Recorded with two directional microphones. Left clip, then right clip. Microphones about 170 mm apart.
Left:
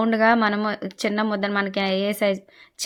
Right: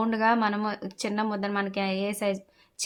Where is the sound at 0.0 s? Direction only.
20° left (ahead or behind).